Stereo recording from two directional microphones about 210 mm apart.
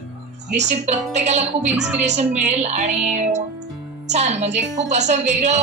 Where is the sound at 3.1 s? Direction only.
35° right (ahead or behind).